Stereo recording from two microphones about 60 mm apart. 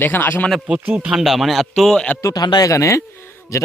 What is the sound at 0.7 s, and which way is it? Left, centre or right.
Speech, centre.